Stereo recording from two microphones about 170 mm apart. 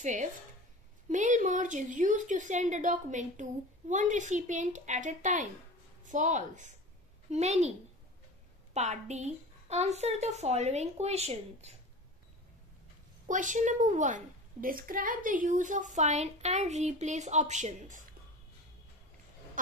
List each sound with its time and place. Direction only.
0.0 s a child's voice: 45° right (ahead or behind)
8.7 s a woman's voice: 40° right (ahead or behind)
13.3 s a child's voice: 45° right (ahead or behind)